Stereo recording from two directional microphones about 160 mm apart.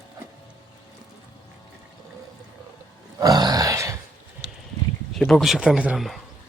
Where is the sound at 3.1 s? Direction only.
25° right (ahead or behind).